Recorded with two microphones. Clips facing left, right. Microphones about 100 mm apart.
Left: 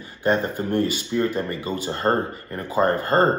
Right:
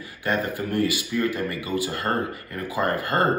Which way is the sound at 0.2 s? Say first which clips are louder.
Left 4 dB; 30° left (ahead or behind).